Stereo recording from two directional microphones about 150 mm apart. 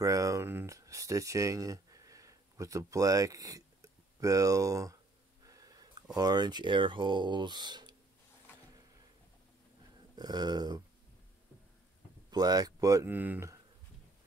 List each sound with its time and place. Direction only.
0.0 s a sound: 20° right (ahead or behind)
6.1 s speech: 25° right (ahead or behind)
10.1 s speech: 25° right (ahead or behind)
12.3 s speech: 25° right (ahead or behind)